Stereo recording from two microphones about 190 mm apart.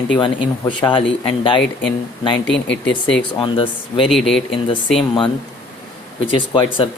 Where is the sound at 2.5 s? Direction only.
70° left (ahead or behind).